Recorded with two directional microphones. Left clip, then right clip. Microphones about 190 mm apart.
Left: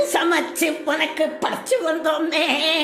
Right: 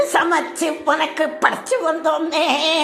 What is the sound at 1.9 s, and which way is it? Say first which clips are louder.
Music: right 2 dB; 10° left (ahead or behind).